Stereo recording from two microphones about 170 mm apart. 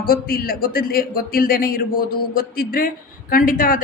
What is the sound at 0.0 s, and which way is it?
Speech, 60° left (ahead or behind).